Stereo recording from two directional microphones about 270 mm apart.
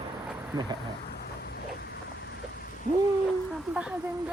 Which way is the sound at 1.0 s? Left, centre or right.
Left.